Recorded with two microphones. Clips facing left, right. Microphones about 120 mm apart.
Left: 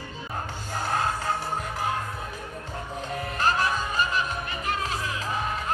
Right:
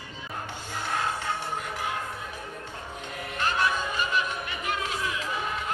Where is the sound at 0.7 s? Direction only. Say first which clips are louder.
Left 3 dB; 40° left (ahead or behind).